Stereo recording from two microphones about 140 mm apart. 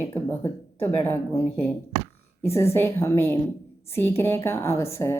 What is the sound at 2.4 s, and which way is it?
A woman's voice, 20° left (ahead or behind).